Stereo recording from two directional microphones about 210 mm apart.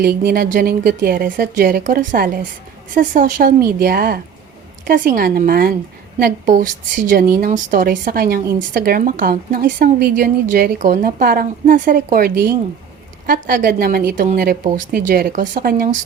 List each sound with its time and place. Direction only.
0.0 s a woman's voice: 45° right (ahead or behind)